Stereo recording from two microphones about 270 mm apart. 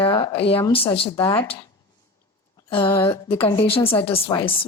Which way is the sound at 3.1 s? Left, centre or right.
Centre.